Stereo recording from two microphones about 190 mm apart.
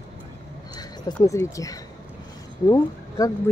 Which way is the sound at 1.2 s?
15° left (ahead or behind).